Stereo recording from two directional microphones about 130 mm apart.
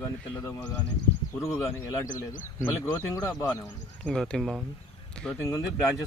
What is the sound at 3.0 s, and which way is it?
Speech, 25° left (ahead or behind).